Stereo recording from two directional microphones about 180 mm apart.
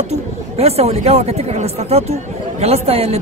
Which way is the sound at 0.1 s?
35° right (ahead or behind).